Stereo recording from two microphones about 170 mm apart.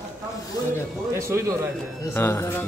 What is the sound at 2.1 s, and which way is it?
Speech, 15° left (ahead or behind).